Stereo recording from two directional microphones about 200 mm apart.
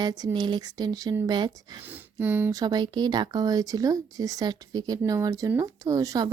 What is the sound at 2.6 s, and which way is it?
A woman's voice, 20° right (ahead or behind).